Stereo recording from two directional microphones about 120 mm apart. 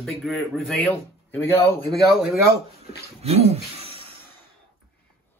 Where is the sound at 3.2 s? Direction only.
60° right (ahead or behind).